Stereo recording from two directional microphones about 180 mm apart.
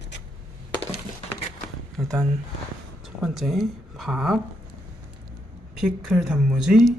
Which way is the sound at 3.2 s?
Centre (ahead or behind).